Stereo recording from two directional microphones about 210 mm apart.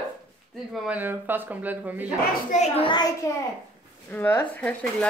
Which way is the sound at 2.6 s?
25° left (ahead or behind).